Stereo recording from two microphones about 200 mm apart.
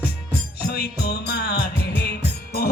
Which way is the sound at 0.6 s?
50° left (ahead or behind).